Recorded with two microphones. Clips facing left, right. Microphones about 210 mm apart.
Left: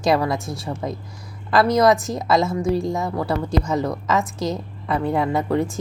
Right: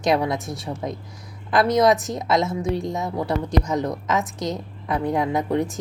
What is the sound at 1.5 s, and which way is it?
A woman's voice, 20° right (ahead or behind).